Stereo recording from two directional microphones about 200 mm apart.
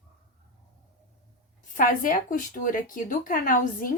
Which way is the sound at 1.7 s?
40° left (ahead or behind).